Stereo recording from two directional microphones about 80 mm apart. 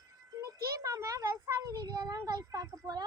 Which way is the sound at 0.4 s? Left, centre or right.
Right.